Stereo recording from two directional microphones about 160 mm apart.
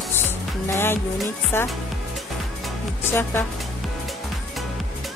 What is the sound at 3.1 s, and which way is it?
Speech, 15° left (ahead or behind).